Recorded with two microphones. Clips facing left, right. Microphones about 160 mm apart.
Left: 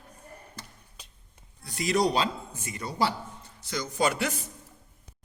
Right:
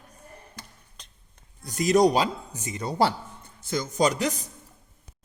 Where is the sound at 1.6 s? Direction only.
45° right (ahead or behind).